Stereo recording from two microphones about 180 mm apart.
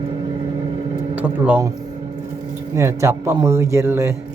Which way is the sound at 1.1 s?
10° right (ahead or behind).